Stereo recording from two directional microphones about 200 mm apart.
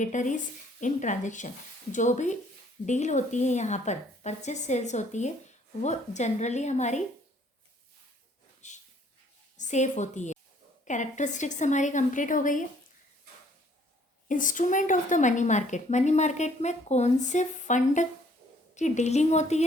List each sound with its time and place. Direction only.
0.0 s a woman's voice: 40° left (ahead or behind)
8.6 s a sound: 35° left (ahead or behind)
9.6 s a woman's voice: 35° left (ahead or behind)
14.3 s a woman's voice: 40° left (ahead or behind)